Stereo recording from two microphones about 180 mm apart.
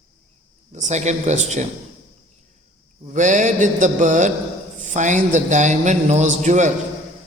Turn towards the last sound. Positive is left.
turn(degrees=-40)  # may be behind; listen again after turning